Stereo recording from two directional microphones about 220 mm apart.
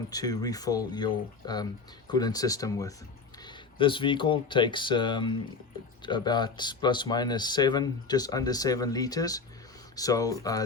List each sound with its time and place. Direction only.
0.1 s speech: 15° left (ahead or behind)